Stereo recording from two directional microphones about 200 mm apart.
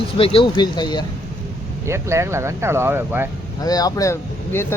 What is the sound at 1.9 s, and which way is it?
Speech, 15° right (ahead or behind).